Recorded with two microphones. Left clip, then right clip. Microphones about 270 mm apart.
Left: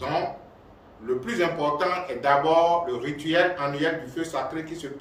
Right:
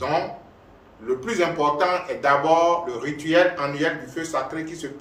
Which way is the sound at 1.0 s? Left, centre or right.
Centre.